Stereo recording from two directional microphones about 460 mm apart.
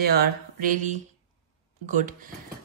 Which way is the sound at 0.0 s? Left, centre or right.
Centre.